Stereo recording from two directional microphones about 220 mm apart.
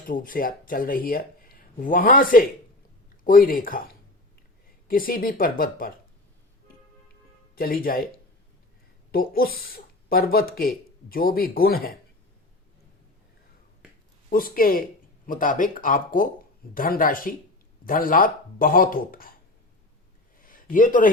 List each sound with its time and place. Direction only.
0.1 s speech: 40° left (ahead or behind)
7.5 s speech: 40° left (ahead or behind)
9.1 s speech: 40° left (ahead or behind)
14.3 s speech: 40° left (ahead or behind)
20.4 s a sound: 40° left (ahead or behind)